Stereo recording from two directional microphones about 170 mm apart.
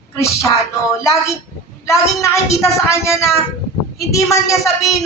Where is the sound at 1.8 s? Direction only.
20° left (ahead or behind).